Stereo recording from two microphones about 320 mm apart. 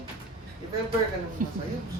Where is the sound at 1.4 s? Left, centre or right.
Right.